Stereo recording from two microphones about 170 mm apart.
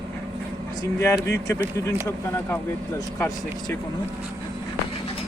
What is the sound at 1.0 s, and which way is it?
Speech, 10° left (ahead or behind).